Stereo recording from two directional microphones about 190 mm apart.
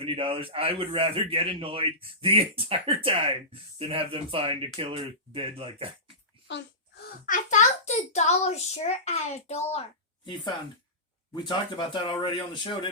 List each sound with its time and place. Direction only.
0.0 s a man's voice: 30° right (ahead or behind)
7.3 s a child's voice: 40° left (ahead or behind)
11.3 s speech: 25° left (ahead or behind)